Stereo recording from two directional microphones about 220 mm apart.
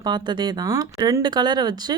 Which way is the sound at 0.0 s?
20° right (ahead or behind).